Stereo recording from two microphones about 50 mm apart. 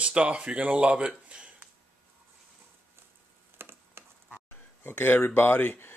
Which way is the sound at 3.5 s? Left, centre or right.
Right.